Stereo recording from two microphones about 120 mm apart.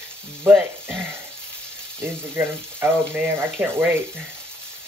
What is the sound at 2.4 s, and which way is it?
Speech, 20° right (ahead or behind).